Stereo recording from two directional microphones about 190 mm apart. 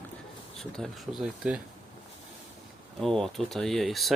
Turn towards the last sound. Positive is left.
turn(degrees=0)  # may be behind; listen again after turning